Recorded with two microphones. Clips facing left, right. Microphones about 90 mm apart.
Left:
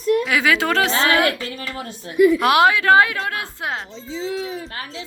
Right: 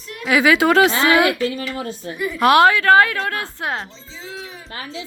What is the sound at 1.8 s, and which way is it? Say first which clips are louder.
Speech: right 4 dB; 35° right (ahead or behind).